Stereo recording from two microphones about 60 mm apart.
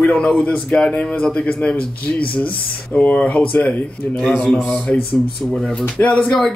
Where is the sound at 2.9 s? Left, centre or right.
Left.